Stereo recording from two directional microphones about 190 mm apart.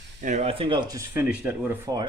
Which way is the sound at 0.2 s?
40° right (ahead or behind).